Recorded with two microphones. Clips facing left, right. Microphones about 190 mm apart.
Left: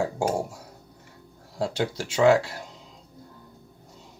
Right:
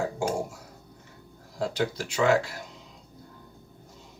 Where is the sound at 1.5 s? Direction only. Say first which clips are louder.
Left 1 dB; 30° left (ahead or behind).